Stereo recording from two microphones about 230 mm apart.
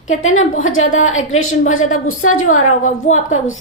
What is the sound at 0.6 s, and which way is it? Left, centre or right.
A woman's voice, left.